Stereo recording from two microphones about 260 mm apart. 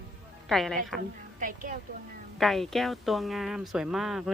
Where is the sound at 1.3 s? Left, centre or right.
Right.